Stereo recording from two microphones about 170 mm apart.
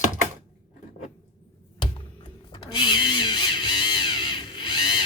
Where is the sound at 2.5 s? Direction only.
30° left (ahead or behind).